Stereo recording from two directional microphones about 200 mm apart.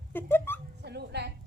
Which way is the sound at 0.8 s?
55° right (ahead or behind).